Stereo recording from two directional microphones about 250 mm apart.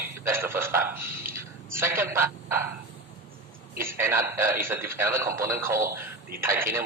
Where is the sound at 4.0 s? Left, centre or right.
Centre.